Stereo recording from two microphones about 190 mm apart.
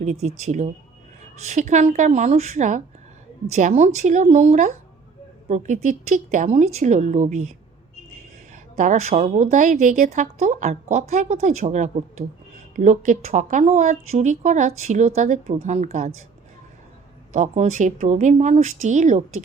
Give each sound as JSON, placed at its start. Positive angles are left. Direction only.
{"t": 0.0, "sound": "a woman's voice", "side_deg": -35}
{"t": 8.7, "sound": "a woman's voice", "side_deg": -40}
{"t": 17.3, "sound": "a woman's voice", "side_deg": -40}